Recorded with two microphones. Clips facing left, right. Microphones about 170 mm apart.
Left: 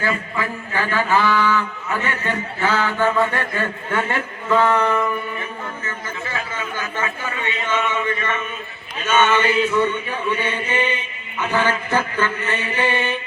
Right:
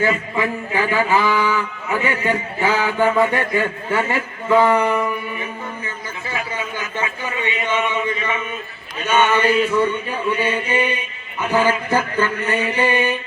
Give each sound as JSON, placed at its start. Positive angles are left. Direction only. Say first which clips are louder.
{"t": 0.0, "sound": "a man's voice", "louder": "right 4 dB", "side_deg": -15}
{"t": 6.3, "sound": "a sound", "louder": "right 3 dB", "side_deg": -15}
{"t": 9.0, "sound": "a man's voice", "louder": "right 1 dB", "side_deg": -15}